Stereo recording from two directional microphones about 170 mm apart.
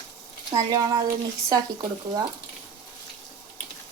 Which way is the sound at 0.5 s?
20° right (ahead or behind).